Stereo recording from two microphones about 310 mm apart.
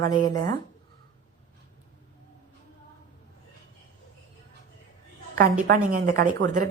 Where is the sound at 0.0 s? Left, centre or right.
Centre.